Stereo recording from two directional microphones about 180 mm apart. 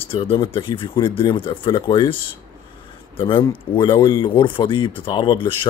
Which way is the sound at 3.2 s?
25° left (ahead or behind).